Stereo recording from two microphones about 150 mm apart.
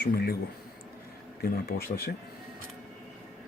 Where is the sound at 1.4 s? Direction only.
90° left.